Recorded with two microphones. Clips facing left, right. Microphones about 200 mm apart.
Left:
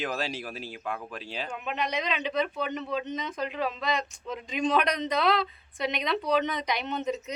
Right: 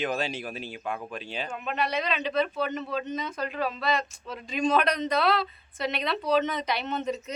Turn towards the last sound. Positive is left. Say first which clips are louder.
# even
turn(degrees=15)  # may be behind; listen again after turning